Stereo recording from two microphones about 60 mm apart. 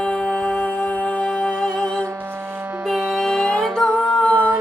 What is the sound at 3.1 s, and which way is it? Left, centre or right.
Music, centre.